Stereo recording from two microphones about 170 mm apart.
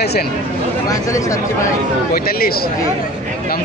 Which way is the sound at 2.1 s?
60° left (ahead or behind).